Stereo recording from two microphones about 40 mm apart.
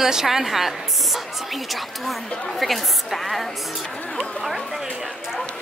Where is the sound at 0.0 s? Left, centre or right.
Centre.